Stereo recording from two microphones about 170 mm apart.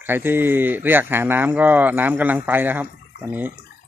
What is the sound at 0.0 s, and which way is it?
Speech, 10° right (ahead or behind).